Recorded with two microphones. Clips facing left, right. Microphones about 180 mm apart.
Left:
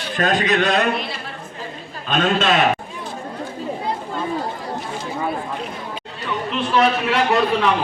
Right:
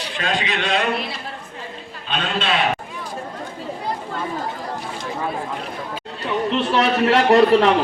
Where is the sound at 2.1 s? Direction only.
45° left (ahead or behind).